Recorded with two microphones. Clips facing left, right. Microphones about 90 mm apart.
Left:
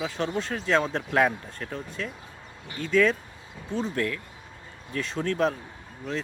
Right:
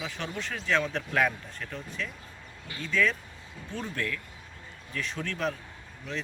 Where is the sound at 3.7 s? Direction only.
30° left (ahead or behind).